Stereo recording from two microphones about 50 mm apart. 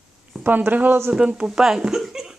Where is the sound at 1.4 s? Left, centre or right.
Centre.